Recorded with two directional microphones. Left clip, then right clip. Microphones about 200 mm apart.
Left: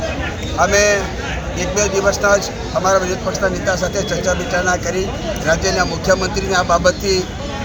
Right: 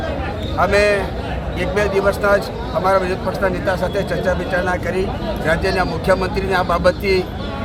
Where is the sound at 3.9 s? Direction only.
25° right (ahead or behind).